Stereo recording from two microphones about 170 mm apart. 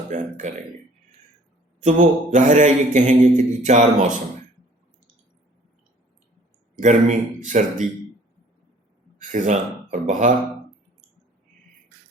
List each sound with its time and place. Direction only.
0.1 s mantra: 45° right (ahead or behind)
1.8 s mantra: 45° right (ahead or behind)
6.7 s mantra: 45° right (ahead or behind)
9.1 s speech: 45° right (ahead or behind)